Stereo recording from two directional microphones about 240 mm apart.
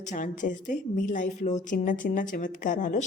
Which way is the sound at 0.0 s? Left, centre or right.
Left.